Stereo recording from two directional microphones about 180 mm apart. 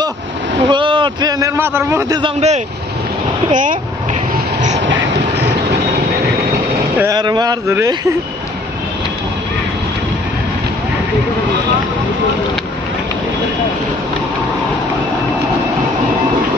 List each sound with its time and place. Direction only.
0.7 s a man's voice: 25° right (ahead or behind)
2.2 s speech: 40° right (ahead or behind)
4.6 s train: 40° right (ahead or behind)
7.0 s speech: 20° right (ahead or behind)